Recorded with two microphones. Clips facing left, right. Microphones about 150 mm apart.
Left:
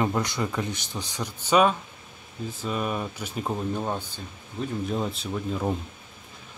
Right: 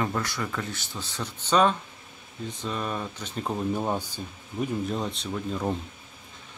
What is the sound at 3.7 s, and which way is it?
Speech, 10° right (ahead or behind).